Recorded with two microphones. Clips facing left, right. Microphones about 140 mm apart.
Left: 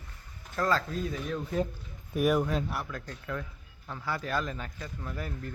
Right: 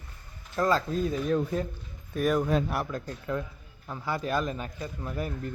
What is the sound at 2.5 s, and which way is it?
Speech, 50° right (ahead or behind).